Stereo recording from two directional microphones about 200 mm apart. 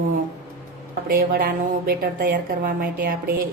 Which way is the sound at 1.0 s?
45° right (ahead or behind).